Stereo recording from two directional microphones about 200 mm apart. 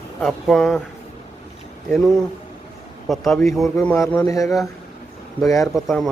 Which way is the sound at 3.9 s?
15° left (ahead or behind).